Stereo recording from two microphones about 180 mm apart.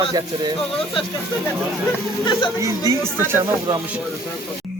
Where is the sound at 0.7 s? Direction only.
30° left (ahead or behind).